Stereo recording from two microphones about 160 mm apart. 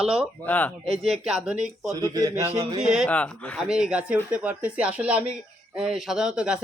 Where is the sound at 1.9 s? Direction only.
25° right (ahead or behind).